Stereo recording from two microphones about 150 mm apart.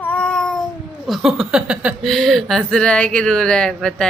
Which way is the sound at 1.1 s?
Centre (ahead or behind).